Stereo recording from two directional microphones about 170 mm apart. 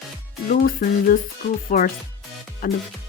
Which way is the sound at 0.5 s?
55° left (ahead or behind).